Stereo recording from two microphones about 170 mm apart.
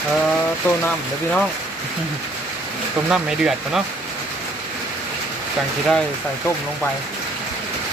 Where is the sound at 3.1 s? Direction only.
5° right (ahead or behind).